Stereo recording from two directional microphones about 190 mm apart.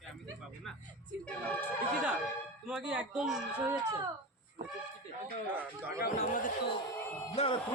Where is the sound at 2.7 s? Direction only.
5° right (ahead or behind).